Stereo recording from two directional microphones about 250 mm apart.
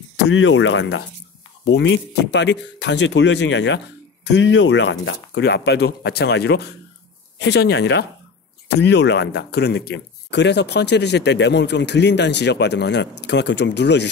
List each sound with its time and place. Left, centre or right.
0.3 s speech: left